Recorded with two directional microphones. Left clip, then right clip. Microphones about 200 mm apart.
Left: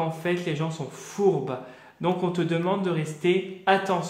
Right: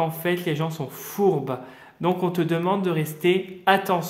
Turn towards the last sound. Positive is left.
turn(degrees=-35)  # may be behind; listen again after turning